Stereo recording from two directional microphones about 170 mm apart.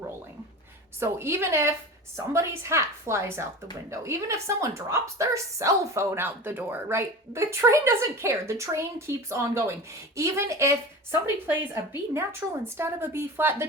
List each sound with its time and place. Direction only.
0.9 s a woman's voice: 15° right (ahead or behind)